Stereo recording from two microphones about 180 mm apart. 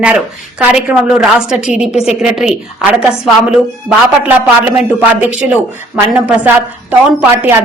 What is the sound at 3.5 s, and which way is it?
A woman's voice, 5° right (ahead or behind).